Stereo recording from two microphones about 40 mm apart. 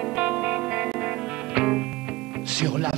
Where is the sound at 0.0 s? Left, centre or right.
Right.